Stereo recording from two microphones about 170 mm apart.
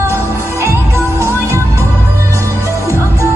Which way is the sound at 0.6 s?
15° right (ahead or behind).